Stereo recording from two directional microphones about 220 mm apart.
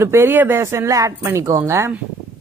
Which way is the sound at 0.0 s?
10° right (ahead or behind).